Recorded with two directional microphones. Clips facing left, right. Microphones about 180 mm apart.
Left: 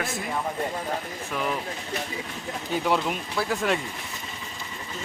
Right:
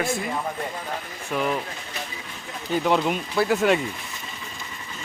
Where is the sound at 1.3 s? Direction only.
5° right (ahead or behind).